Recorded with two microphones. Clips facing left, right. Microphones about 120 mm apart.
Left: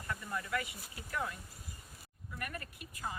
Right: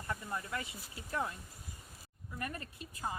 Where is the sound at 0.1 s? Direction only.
25° right (ahead or behind).